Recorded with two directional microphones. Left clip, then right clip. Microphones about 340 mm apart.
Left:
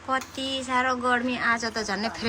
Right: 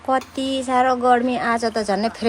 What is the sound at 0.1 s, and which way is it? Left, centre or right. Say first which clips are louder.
Speech: right 7 dB; centre.